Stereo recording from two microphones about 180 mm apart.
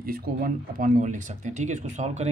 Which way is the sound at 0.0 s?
55° right (ahead or behind).